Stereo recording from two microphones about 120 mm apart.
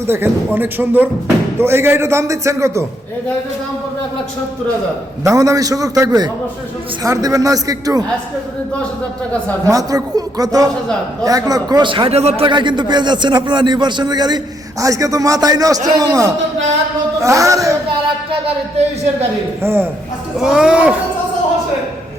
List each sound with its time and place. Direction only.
0.1 s a man's voice: 15° right (ahead or behind)
5.2 s a man's voice: 30° right (ahead or behind)
9.6 s a man's voice: 30° right (ahead or behind)
12.1 s speech: 60° right (ahead or behind)
12.5 s a man's voice: 40° right (ahead or behind)
19.6 s speech: 15° right (ahead or behind)
20.4 s speech: 5° right (ahead or behind)